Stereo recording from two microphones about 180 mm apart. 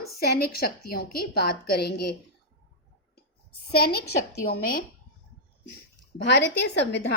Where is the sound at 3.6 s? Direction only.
60° left (ahead or behind).